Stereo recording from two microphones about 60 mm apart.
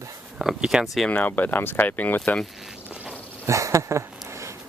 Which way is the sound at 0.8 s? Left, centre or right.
Centre.